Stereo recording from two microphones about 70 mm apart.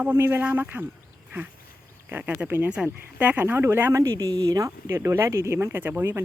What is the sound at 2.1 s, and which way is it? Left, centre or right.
Speech, right.